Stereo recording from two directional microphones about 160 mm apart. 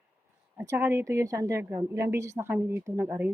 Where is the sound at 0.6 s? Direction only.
15° right (ahead or behind).